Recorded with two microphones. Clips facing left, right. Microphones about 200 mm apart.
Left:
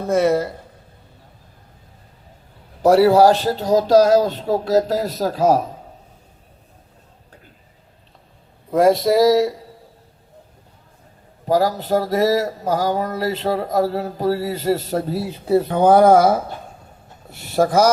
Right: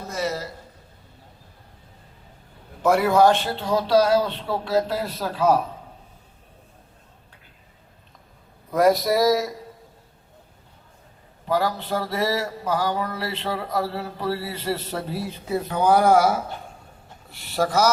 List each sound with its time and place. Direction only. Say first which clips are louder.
0.0 s speech: left 11 dB; 55° left (ahead or behind)
2.8 s speech: left 5 dB; 35° left (ahead or behind)
8.7 s speech: left 4 dB; 25° left (ahead or behind)
11.4 s speech: left 6 dB; 40° left (ahead or behind)